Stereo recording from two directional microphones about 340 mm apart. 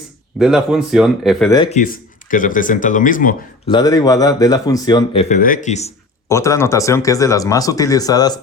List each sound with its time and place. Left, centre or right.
0.3 s speech: centre
1.5 s speech: centre
3.8 s speech: centre
6.2 s speech: centre